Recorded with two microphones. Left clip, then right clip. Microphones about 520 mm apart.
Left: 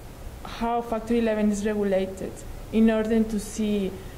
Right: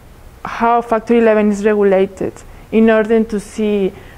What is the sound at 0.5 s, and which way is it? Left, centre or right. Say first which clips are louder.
A woman's voice: right 13 dB; right.